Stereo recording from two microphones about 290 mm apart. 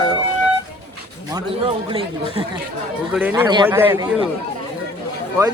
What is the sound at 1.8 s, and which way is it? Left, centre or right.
Speech, centre.